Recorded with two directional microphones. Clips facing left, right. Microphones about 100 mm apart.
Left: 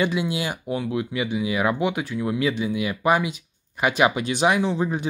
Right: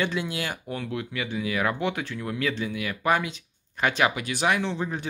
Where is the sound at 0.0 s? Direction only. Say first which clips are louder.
Left 4 dB; 15° left (ahead or behind).